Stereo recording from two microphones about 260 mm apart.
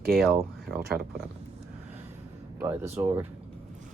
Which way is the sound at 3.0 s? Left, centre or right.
Centre.